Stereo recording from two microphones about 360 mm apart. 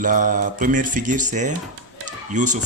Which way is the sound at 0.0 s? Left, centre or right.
Right.